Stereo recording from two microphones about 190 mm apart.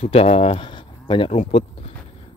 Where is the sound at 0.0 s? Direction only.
30° left (ahead or behind).